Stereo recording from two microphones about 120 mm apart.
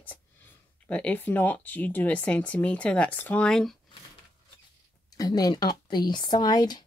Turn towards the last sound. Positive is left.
turn(degrees=35)  # may be behind; listen again after turning